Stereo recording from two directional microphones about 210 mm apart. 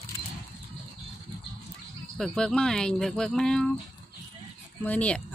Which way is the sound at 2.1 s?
Centre (ahead or behind).